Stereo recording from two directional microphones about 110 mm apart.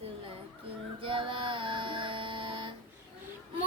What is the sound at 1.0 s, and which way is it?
Music, 50° right (ahead or behind).